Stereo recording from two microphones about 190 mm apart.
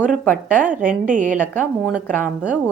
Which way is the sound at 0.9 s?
40° right (ahead or behind).